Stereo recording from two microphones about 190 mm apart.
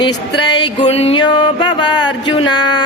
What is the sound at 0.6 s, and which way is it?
Music, 30° left (ahead or behind).